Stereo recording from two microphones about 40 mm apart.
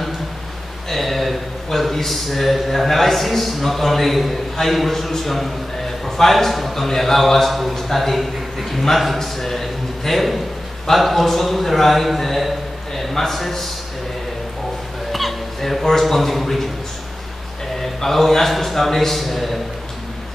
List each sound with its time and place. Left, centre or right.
0.8 s a man's voice: centre
15.1 s hiccup: centre
15.8 s a man's voice: centre
17.7 s a man's voice: centre